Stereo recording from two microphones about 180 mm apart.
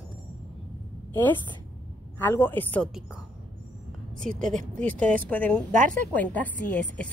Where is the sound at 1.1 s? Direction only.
10° left (ahead or behind).